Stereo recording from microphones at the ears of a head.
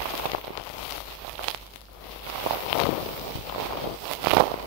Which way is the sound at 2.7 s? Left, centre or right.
Left.